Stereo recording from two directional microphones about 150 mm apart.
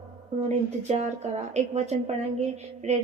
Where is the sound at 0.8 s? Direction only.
50° right (ahead or behind).